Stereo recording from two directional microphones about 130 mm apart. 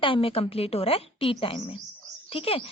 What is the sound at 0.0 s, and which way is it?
Speech, 45° left (ahead or behind).